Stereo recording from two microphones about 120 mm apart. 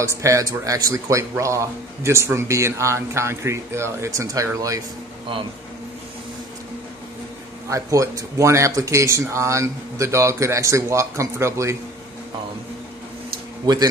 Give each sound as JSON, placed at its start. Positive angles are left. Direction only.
{"t": 0.0, "sound": "a man's voice", "side_deg": -25}
{"t": 7.7, "sound": "a man's voice", "side_deg": -30}
{"t": 13.7, "sound": "speech", "side_deg": -35}